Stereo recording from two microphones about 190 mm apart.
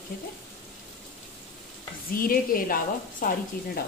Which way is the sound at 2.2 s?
50° left (ahead or behind).